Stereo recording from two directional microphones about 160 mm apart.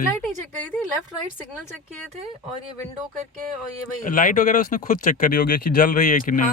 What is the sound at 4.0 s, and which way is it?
Speech, 55° left (ahead or behind).